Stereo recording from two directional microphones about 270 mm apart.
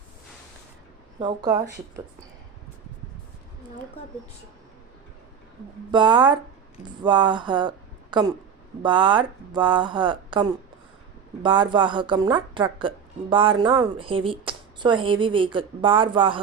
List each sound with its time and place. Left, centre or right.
1.2 s speech: centre
5.9 s speech: centre